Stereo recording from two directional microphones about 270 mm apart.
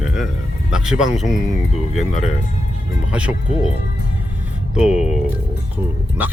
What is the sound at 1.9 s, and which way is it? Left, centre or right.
Speech, left.